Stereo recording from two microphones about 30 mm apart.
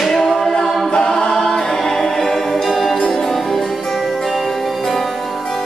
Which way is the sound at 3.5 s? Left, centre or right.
Centre.